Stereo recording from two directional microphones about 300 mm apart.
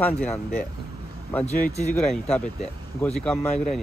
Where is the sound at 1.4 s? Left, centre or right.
Left.